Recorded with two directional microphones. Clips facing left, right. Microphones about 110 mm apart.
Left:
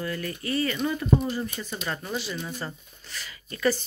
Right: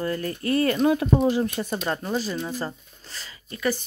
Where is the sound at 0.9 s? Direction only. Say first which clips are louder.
Right 5 dB; 75° right (ahead or behind).